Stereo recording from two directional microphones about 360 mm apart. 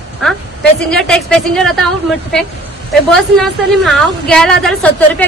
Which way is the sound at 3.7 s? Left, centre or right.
Centre.